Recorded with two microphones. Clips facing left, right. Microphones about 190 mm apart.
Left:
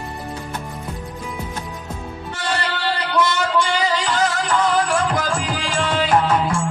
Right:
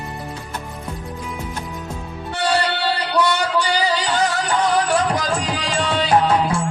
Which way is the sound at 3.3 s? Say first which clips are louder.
Even; 35° right (ahead or behind).